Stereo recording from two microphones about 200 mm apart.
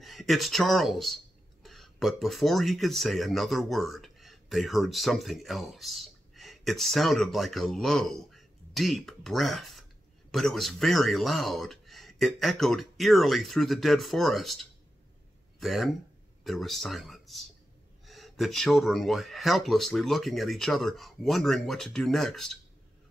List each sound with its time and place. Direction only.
0.0 s speech: centre (ahead or behind)